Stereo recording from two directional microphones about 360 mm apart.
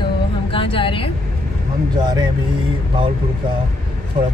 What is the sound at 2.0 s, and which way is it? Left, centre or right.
Speech, centre.